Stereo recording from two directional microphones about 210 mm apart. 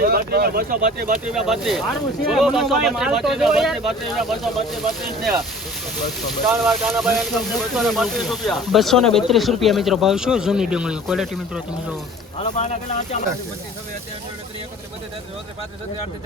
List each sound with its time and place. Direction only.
0.0 s speech: 45° right (ahead or behind)
1.3 s speech: centre (ahead or behind)
6.2 s speech: centre (ahead or behind)
12.4 s speech: 35° left (ahead or behind)